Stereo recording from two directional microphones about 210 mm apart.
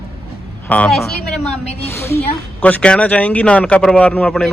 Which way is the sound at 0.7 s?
5° left (ahead or behind).